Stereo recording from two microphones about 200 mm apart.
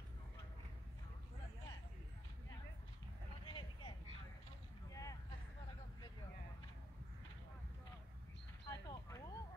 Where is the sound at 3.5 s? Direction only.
25° left (ahead or behind).